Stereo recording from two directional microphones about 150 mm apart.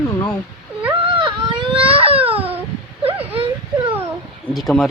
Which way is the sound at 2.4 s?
10° right (ahead or behind).